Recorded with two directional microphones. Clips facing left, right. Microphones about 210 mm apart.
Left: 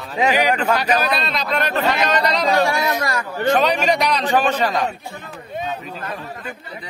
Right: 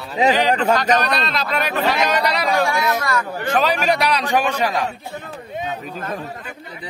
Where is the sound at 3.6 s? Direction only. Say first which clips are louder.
Left 1 dB; 5° right (ahead or behind).